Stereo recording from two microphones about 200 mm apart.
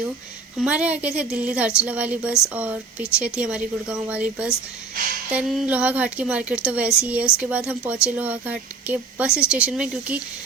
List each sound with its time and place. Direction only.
0.6 s a woman's voice: 5° right (ahead or behind)